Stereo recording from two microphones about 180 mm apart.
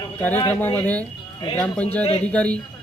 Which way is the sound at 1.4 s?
25° left (ahead or behind).